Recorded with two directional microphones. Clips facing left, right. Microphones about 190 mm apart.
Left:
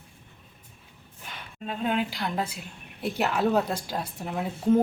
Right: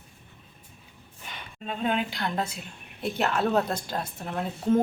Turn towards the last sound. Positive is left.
turn(degrees=10)  # may be behind; listen again after turning